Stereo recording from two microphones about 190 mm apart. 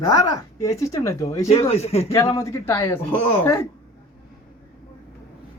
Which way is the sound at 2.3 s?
15° left (ahead or behind).